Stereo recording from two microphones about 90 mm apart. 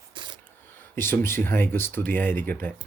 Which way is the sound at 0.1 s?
60° right (ahead or behind).